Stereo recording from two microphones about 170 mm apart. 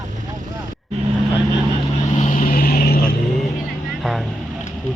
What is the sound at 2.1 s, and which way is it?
Vehicle, 50° left (ahead or behind).